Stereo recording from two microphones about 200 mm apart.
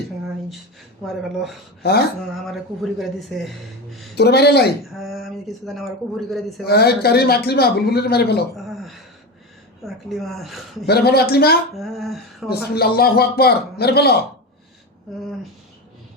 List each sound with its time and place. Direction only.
1.0 s speech: centre (ahead or behind)
1.8 s speech: 55° left (ahead or behind)
2.5 s speech: centre (ahead or behind)
4.1 s speech: 55° left (ahead or behind)
4.9 s speech: centre (ahead or behind)
6.7 s speech: 50° left (ahead or behind)
8.5 s a woman's voice: centre (ahead or behind)
10.8 s speech: 55° left (ahead or behind)
11.7 s speech: centre (ahead or behind)
12.5 s speech: 50° left (ahead or behind)